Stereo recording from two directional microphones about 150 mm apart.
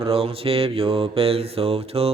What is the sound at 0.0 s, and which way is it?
Mantra, 40° right (ahead or behind).